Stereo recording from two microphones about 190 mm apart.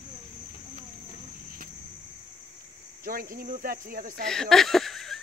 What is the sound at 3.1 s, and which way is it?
Speech, 50° right (ahead or behind).